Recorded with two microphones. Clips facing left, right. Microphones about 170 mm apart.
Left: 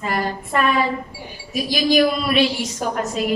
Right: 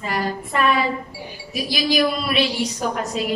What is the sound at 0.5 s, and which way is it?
A woman's voice, 45° left (ahead or behind).